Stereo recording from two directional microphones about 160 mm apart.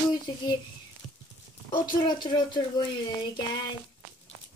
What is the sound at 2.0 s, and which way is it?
Speech, 30° left (ahead or behind).